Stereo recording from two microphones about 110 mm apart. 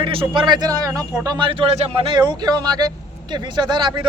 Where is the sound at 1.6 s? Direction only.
65° right (ahead or behind).